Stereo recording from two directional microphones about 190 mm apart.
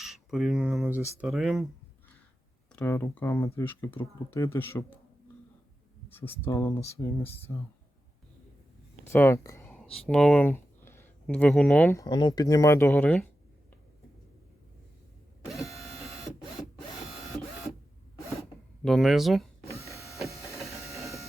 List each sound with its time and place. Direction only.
0.0 s speech: centre (ahead or behind)
2.7 s speech: 10° left (ahead or behind)
6.1 s speech: 10° left (ahead or behind)
9.0 s speech: 10° left (ahead or behind)
15.7 s printer: centre (ahead or behind)
18.9 s speech: centre (ahead or behind)
19.8 s printer: 15° left (ahead or behind)